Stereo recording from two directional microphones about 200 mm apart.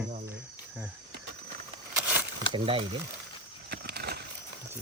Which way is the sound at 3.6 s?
55° right (ahead or behind).